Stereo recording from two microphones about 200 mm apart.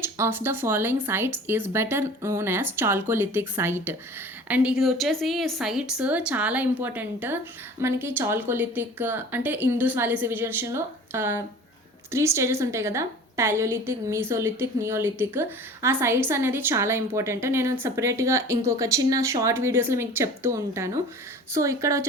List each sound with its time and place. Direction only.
0.0 s a woman's voice: 10° right (ahead or behind)